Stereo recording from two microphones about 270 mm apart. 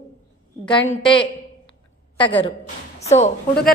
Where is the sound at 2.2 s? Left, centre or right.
Centre.